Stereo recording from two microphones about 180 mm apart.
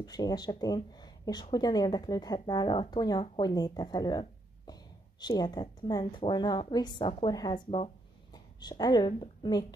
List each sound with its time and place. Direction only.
0.0 s a woman's voice: 20° left (ahead or behind)